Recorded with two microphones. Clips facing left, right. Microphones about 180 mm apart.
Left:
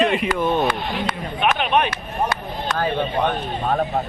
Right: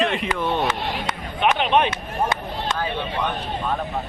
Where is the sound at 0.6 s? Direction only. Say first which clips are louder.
Left 2 dB; 20° right (ahead or behind).